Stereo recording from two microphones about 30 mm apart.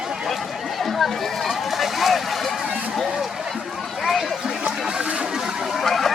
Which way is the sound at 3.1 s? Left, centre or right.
Centre.